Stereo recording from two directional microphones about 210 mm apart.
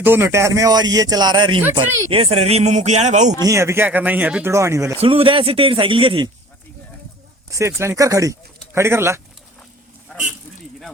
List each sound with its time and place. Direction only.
0.0 s speech: 10° right (ahead or behind); by 3.3 s 35° right (ahead or behind)
3.4 s speech: 15° right (ahead or behind)
4.9 s speech: 25° right (ahead or behind)
7.8 s speech: 15° right (ahead or behind)
10.1 s a sound: 5° left (ahead or behind)